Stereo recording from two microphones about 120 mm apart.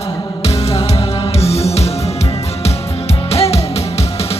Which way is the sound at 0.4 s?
50° left (ahead or behind).